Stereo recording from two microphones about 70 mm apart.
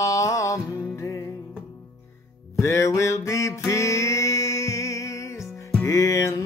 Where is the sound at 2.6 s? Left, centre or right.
Left.